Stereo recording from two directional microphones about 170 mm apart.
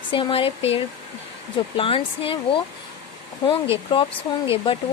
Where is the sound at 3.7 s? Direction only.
30° left (ahead or behind).